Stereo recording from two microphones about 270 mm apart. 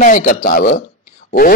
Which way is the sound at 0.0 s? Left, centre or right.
Left.